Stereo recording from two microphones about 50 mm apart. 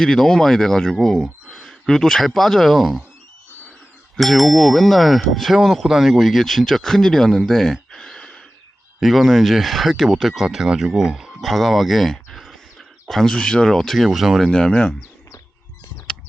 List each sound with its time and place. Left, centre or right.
0.0 s speech: centre
4.2 s ding: centre
9.0 s ding: centre
10.4 s speech: centre
11.3 s speech: centre
13.2 s speech: centre
13.7 s ding: centre
14.5 s speech: centre